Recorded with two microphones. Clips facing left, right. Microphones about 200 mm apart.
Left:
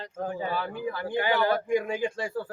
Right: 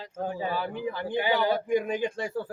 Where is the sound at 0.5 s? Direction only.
15° right (ahead or behind).